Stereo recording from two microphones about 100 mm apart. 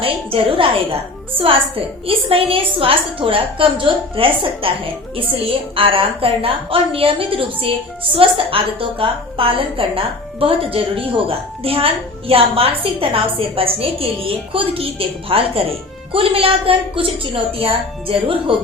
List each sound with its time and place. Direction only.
0.0 s a woman's voice: 65° right (ahead or behind)
5.7 s a woman's voice: 65° right (ahead or behind)